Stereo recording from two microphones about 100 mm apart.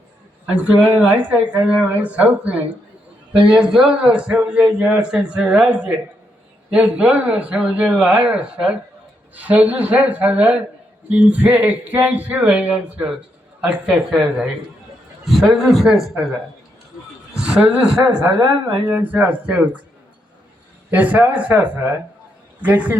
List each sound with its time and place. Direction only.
1.0 s a man's voice: 15° right (ahead or behind)
17.3 s a man's voice: 10° right (ahead or behind)
18.0 s speech: 40° right (ahead or behind)
18.9 s a man's voice: 15° right (ahead or behind)
20.9 s a man's voice: 15° right (ahead or behind)